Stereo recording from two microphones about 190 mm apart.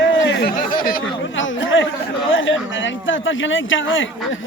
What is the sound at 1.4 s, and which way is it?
Chatter, 85° left.